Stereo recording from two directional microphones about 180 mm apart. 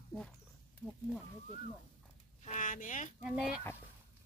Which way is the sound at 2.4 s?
45° left (ahead or behind).